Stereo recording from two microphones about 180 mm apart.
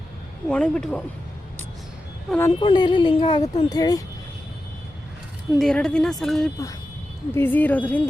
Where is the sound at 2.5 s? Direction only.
25° left (ahead or behind).